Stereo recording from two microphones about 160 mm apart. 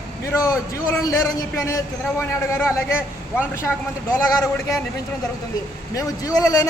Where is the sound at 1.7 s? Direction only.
15° left (ahead or behind).